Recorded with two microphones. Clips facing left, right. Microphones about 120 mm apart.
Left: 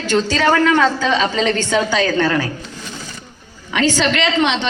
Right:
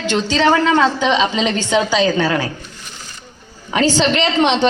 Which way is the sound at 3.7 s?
30° right (ahead or behind).